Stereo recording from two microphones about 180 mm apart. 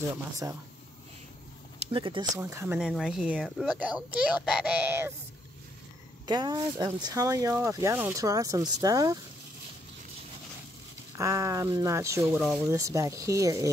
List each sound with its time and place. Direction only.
1.8 s speech: 30° right (ahead or behind)
2.3 s a child's voice: 15° right (ahead or behind)
2.9 s a child's voice: centre (ahead or behind)
6.2 s speech: 25° right (ahead or behind)
11.1 s a child's voice: 15° right (ahead or behind)
12.4 s speech: centre (ahead or behind)
12.6 s a child's voice: 20° right (ahead or behind)